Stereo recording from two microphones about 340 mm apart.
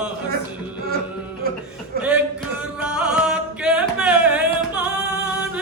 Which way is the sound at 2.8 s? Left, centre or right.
Centre.